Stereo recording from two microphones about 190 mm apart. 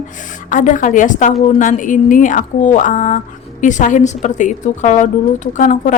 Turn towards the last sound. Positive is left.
turn(degrees=40)  # may be behind; listen again after turning